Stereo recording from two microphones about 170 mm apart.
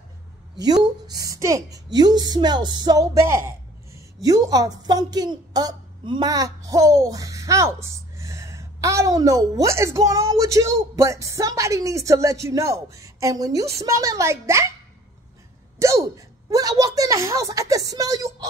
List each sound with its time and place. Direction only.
0.6 s speech: 25° right (ahead or behind)
15.8 s a woman's voice: 15° right (ahead or behind)